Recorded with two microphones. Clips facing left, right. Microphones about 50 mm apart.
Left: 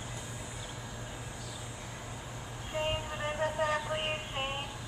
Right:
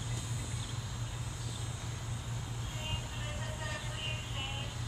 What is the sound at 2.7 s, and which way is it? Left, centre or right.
Music, left.